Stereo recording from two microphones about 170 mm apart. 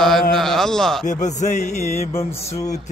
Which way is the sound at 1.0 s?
45° left (ahead or behind).